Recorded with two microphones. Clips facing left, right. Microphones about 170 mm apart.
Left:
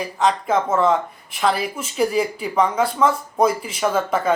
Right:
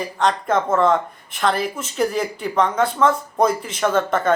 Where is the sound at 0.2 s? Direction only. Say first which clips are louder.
Even; centre (ahead or behind).